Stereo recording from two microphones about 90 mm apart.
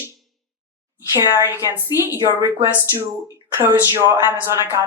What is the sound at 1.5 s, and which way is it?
A woman's voice, 25° right (ahead or behind).